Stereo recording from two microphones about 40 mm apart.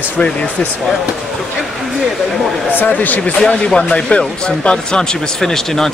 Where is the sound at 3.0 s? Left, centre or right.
Left.